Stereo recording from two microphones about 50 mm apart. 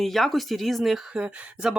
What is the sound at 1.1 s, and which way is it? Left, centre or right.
Speech, right.